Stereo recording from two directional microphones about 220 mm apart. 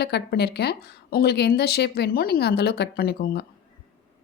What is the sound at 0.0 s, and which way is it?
Speech, 50° left (ahead or behind).